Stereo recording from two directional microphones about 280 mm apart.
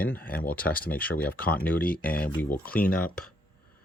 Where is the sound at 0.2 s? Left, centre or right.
Left.